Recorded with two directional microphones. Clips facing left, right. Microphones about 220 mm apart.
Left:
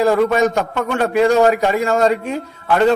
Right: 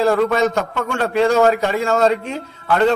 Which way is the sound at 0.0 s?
15° left (ahead or behind).